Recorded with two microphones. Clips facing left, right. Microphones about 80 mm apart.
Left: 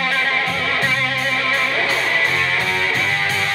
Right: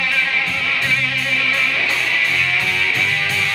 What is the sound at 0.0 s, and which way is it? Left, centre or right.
Music, left.